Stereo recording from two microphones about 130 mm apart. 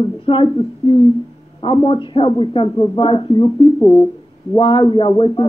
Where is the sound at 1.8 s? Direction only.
40° left (ahead or behind).